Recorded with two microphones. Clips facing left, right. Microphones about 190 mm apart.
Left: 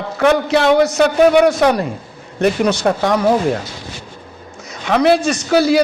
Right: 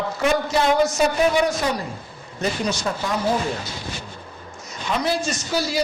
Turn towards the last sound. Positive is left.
turn(degrees=65)  # may be behind; listen again after turning